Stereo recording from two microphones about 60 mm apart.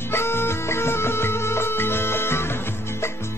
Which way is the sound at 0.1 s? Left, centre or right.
Left.